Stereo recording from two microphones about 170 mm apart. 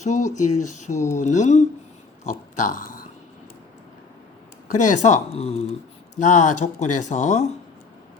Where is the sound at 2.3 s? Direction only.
50° left (ahead or behind).